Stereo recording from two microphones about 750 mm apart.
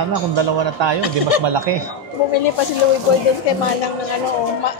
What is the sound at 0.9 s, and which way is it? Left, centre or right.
Music, left.